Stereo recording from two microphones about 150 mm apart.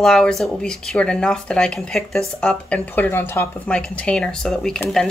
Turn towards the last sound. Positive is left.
turn(degrees=5)  # may be behind; listen again after turning